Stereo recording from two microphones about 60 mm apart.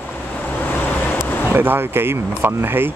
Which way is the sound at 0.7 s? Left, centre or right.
Left.